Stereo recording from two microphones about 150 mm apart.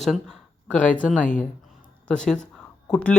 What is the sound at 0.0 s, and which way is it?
Speech, 5° left (ahead or behind).